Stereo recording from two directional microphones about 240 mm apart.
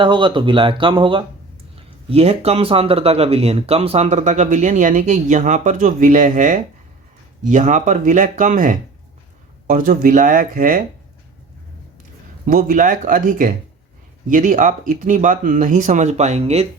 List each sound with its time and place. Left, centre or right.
0.0 s speech: centre; by 10.8 s right
12.5 s speech: right